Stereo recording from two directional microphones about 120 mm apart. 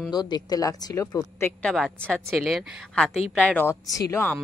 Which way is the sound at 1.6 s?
5° left (ahead or behind).